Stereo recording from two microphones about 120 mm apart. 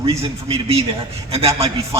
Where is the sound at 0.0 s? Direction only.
50° right (ahead or behind).